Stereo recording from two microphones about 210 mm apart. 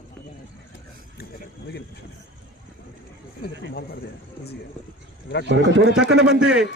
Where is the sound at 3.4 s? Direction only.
50° left (ahead or behind).